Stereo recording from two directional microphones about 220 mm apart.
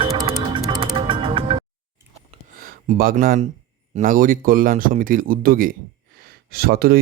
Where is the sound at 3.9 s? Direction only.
40° right (ahead or behind).